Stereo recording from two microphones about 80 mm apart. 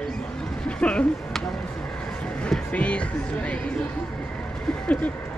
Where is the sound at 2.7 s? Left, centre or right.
Centre.